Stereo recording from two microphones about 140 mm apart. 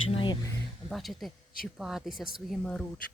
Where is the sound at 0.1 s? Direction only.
40° left (ahead or behind).